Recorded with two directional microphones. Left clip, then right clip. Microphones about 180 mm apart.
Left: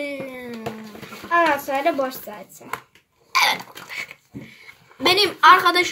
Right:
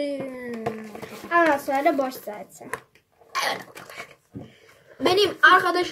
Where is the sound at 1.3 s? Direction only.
20° left (ahead or behind).